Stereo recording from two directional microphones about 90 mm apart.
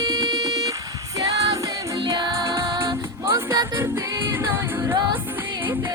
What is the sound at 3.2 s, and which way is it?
Music, 30° right (ahead or behind).